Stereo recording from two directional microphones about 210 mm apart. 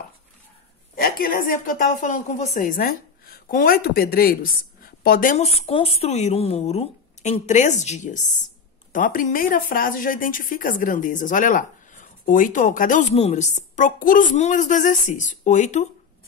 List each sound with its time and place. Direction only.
0.9 s a woman's voice: 45° left (ahead or behind)